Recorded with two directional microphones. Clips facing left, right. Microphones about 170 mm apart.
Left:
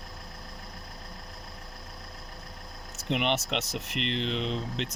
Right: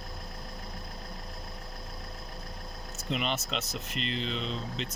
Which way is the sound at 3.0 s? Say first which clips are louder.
Left 4 dB; 70° left (ahead or behind).